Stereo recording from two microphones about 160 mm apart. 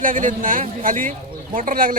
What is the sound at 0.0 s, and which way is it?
A man's voice, 55° right (ahead or behind).